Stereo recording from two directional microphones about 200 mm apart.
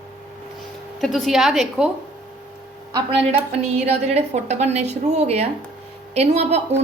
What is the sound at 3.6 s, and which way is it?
A woman's voice, 30° right (ahead or behind).